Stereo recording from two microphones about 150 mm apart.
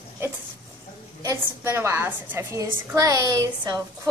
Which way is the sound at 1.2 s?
15° right (ahead or behind).